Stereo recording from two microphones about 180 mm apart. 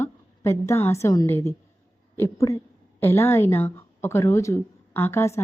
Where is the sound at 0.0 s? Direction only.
15° left (ahead or behind).